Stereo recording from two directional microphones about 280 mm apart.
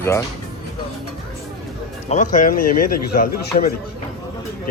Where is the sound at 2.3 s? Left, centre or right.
Left.